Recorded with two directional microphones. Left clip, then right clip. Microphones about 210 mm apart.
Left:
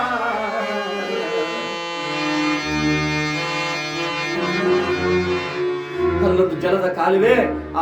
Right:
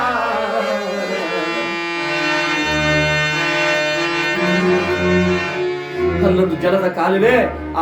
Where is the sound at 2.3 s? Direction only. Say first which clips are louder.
Right 3 dB; 45° right (ahead or behind).